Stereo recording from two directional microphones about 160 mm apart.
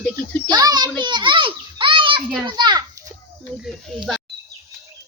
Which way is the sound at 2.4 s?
25° right (ahead or behind).